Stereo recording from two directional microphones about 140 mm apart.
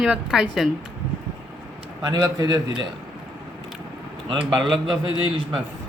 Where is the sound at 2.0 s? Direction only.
30° right (ahead or behind).